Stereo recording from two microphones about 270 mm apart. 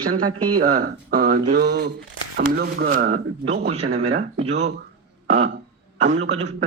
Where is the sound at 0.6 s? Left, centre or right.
Right.